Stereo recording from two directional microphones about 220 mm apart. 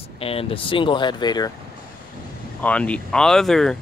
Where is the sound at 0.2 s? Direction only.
25° left (ahead or behind).